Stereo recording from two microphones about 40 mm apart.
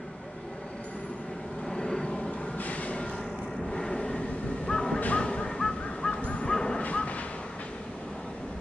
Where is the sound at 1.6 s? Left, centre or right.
Centre.